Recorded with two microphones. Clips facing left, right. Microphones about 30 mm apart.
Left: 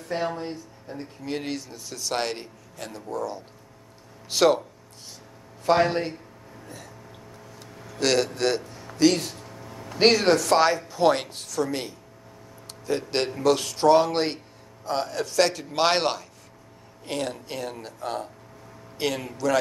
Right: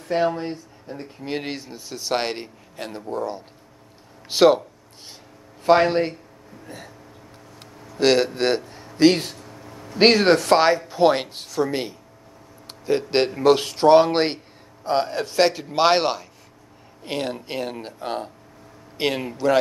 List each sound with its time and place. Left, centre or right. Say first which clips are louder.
0.1 s a man's voice: right 6 dB; right
5.7 s a man's voice: right 4 dB; right
8.0 s a man's voice: right 4 dB; right
9.4 s a sound: even; centre
9.9 s a man's voice: right 3 dB; right; by 16.3 s centre
17.0 s a man's voice: right 3 dB; right